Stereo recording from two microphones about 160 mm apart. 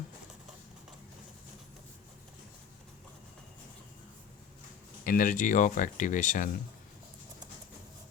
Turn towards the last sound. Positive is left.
turn(degrees=50)  # may be behind; listen again after turning